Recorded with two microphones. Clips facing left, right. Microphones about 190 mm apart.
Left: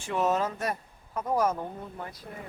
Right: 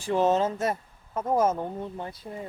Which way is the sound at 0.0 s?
30° right (ahead or behind).